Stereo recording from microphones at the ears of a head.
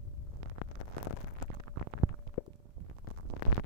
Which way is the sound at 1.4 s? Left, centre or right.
Right.